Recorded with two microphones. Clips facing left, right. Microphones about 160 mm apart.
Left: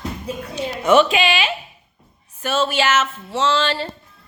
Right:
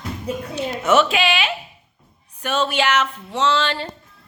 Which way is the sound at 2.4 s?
5° left (ahead or behind).